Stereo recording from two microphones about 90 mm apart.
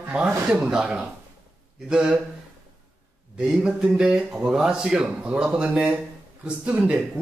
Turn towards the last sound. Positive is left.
turn(degrees=-10)  # may be behind; listen again after turning